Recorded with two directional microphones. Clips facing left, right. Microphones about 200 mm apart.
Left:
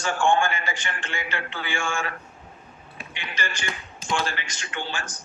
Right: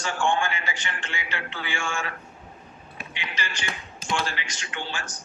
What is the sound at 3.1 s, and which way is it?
Music, 50° left (ahead or behind).